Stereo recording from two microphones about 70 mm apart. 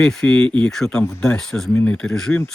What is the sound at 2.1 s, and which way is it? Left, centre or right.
Speech, centre.